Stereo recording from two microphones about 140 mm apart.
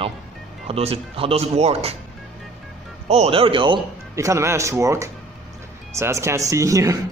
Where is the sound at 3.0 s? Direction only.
50° right (ahead or behind).